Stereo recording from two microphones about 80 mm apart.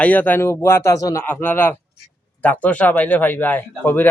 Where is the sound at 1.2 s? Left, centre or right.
Left.